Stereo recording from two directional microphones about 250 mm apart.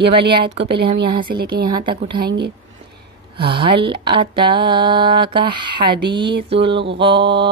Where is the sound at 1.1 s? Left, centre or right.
Centre.